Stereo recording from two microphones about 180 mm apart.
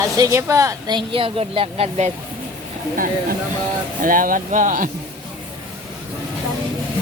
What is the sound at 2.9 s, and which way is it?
Speech, 50° right (ahead or behind).